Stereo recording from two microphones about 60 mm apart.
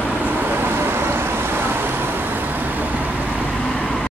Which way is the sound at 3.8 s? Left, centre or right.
Centre.